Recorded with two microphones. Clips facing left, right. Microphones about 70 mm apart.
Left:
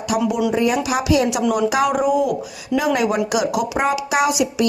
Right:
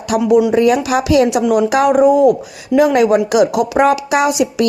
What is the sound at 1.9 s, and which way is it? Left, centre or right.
A woman's voice, right.